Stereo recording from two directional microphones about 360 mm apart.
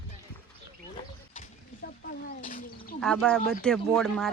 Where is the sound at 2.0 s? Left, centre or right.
Left.